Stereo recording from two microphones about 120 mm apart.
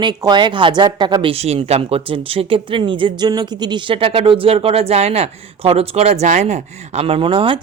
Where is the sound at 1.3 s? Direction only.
60° right (ahead or behind).